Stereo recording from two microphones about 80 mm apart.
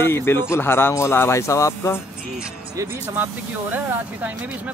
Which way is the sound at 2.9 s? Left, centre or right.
Right.